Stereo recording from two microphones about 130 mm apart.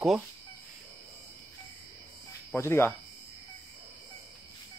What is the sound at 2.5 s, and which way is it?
Speech, 20° left (ahead or behind).